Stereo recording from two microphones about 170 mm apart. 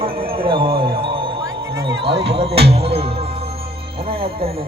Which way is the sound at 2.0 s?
75° right (ahead or behind).